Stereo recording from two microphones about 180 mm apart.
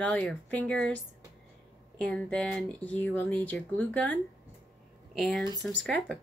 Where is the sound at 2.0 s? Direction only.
5° left (ahead or behind).